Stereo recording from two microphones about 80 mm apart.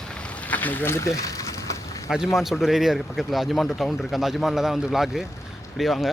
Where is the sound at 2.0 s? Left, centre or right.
Centre.